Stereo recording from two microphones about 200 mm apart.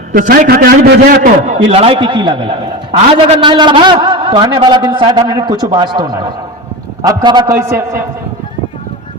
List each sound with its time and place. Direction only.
0.1 s a man's voice: 45° right (ahead or behind)
1.5 s a man's voice: 30° right (ahead or behind)